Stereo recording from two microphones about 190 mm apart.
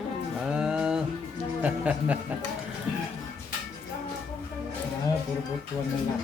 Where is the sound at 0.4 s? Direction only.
5° right (ahead or behind).